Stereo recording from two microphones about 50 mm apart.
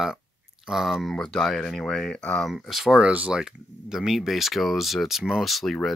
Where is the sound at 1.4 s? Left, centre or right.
Centre.